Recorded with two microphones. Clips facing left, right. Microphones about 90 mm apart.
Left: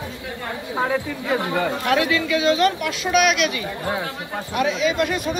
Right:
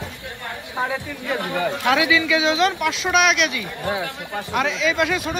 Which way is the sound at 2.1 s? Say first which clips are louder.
Even; 55° left (ahead or behind).